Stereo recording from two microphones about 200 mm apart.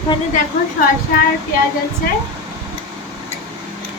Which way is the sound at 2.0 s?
50° left (ahead or behind).